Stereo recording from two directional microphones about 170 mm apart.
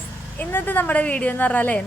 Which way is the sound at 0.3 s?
10° left (ahead or behind).